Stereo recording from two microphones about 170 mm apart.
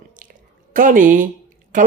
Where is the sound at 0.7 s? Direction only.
50° right (ahead or behind).